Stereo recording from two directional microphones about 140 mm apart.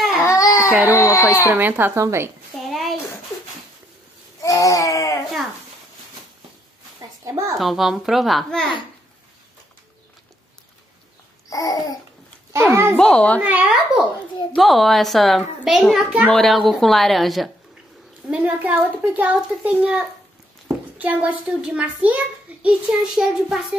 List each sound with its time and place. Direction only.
0.2 s baby cry: 25° left (ahead or behind)
0.9 s babbling: 20° left (ahead or behind)
1.2 s a child's voice: 15° right (ahead or behind)
2.6 s a sound: centre (ahead or behind)
4.4 s baby cry: 25° left (ahead or behind)
7.0 s a sound: 25° right (ahead or behind)
7.5 s a woman's voice: centre (ahead or behind)
11.5 s babbling: 25° left (ahead or behind)
12.5 s a child's voice: 15° right (ahead or behind)
12.9 s a child's voice: 5° left (ahead or behind)
13.4 s a child's voice: 10° right (ahead or behind)
18.3 s a child's voice: 10° right (ahead or behind)